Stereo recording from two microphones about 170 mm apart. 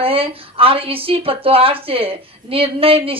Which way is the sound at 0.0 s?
35° right (ahead or behind).